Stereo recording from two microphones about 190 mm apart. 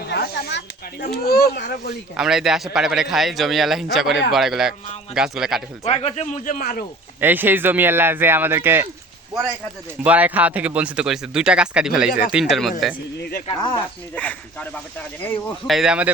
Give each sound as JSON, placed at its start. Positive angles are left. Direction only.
{"t": 0.0, "sound": "snake", "side_deg": 60}
{"t": 1.0, "sound": "a child's voice", "side_deg": 55}
{"t": 2.1, "sound": "a man's voice", "side_deg": -5}
{"t": 5.8, "sound": "a man's voice", "side_deg": 35}
{"t": 7.2, "sound": "speech", "side_deg": -10}
{"t": 10.0, "sound": "a man's voice", "side_deg": -10}
{"t": 13.5, "sound": "speech", "side_deg": 25}
{"t": 14.2, "sound": "speech", "side_deg": 5}
{"t": 15.7, "sound": "a man's voice", "side_deg": -5}